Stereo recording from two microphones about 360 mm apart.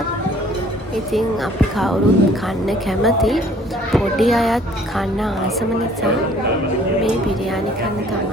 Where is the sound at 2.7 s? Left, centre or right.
Centre.